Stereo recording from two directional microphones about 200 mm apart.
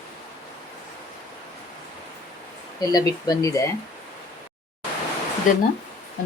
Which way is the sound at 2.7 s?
15° left (ahead or behind).